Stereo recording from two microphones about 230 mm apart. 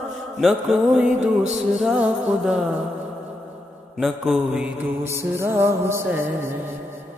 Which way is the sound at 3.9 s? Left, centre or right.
Centre.